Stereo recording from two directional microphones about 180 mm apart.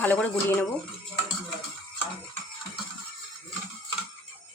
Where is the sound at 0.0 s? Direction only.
10° left (ahead or behind).